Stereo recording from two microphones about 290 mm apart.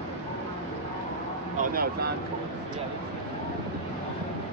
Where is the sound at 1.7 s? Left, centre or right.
Right.